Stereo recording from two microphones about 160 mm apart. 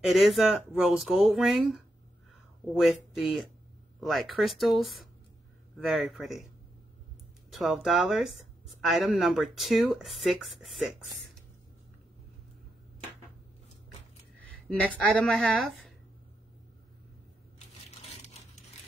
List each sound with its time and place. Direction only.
0.0 s speech: centre (ahead or behind)
2.8 s speech: centre (ahead or behind)
7.5 s speech: centre (ahead or behind)
15.0 s a woman's voice: 5° left (ahead or behind)